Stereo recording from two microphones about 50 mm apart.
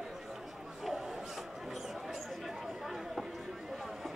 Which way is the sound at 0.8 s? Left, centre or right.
Centre.